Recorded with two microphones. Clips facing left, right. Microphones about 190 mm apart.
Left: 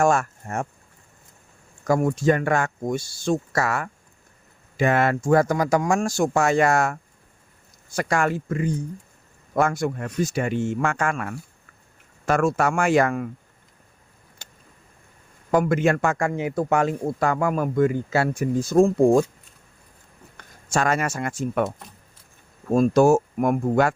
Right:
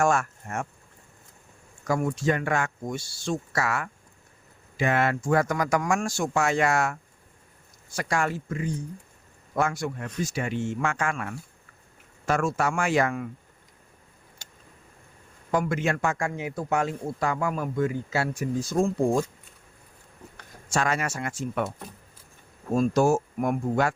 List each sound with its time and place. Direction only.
0.0 s speech: 35° left (ahead or behind)
1.9 s speech: 45° left (ahead or behind)
15.5 s speech: 50° left (ahead or behind)
20.7 s speech: 45° left (ahead or behind)
22.7 s speech: 60° left (ahead or behind)